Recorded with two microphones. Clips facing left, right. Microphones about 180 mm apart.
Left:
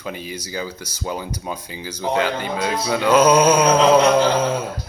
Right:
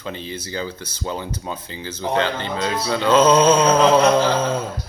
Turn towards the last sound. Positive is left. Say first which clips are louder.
# left 1 dB
turn(degrees=10)  # may be behind; listen again after turning